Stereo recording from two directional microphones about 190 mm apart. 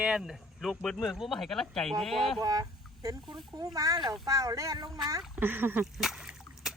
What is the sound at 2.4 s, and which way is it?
Speech, 20° right (ahead or behind).